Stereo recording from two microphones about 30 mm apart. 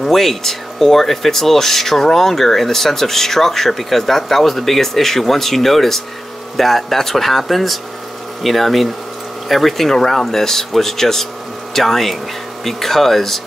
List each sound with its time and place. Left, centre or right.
0.0 s speech: centre